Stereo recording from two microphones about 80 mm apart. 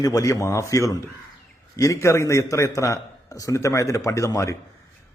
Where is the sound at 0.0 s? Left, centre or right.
Left.